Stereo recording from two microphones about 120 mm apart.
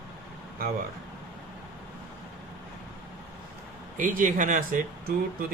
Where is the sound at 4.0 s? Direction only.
90° right.